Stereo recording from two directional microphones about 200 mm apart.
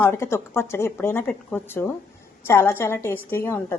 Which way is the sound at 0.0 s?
10° left (ahead or behind).